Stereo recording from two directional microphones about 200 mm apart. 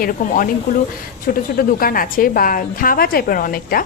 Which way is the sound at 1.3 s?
45° left (ahead or behind).